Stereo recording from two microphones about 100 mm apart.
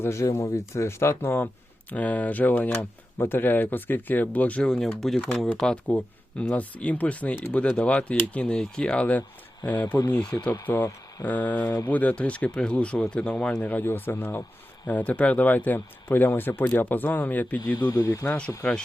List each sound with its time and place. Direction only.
0.0 s speech: 30° left (ahead or behind); by 9.2 s 15° left (ahead or behind)
10.5 s speech: 20° left (ahead or behind)